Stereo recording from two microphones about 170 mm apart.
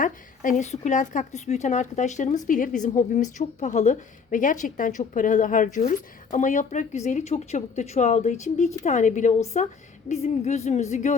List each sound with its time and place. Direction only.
0.0 s a woman's voice: 45° left (ahead or behind)